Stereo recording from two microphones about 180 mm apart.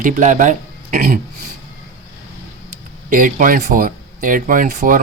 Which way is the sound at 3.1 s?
50° right (ahead or behind).